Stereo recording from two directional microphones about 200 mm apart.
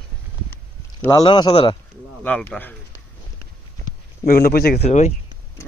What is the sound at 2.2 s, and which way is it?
Speech, 5° left (ahead or behind).